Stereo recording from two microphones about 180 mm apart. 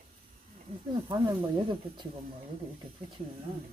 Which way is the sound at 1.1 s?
25° right (ahead or behind).